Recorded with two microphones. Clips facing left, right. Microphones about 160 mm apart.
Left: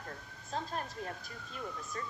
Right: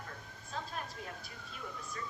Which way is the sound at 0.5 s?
40° left (ahead or behind).